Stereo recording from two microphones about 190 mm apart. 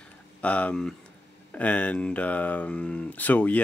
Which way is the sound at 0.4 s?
5° left (ahead or behind).